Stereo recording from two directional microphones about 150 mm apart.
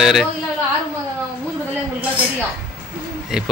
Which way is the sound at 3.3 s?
Centre (ahead or behind).